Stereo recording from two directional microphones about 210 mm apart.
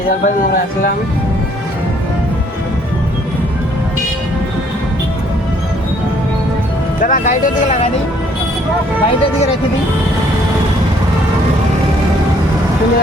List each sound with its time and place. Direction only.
0.4 s speech: 40° left (ahead or behind)
7.0 s speech: 40° left (ahead or behind)